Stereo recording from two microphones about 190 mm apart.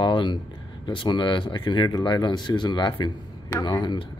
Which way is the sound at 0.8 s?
25° left (ahead or behind).